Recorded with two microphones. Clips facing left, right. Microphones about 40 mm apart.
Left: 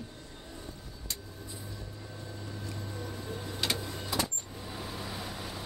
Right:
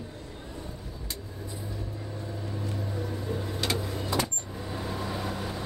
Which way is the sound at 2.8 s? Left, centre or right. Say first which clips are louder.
Right 6 dB; centre.